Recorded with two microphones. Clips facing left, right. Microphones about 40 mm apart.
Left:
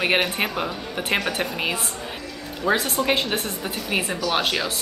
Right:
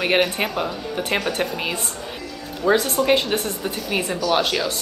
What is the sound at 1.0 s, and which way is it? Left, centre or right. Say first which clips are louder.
A woman's voice: even; centre.